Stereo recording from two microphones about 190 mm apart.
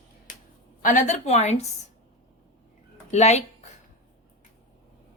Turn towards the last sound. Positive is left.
turn(degrees=35)  # may be behind; listen again after turning